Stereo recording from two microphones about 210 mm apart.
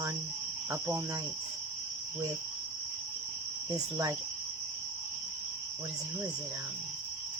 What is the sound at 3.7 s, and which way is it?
Speech, 15° right (ahead or behind).